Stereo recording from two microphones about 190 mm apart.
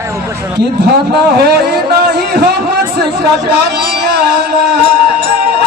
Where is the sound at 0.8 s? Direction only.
60° right (ahead or behind).